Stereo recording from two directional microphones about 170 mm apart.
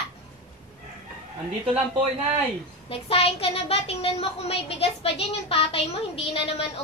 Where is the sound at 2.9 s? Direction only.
35° left (ahead or behind).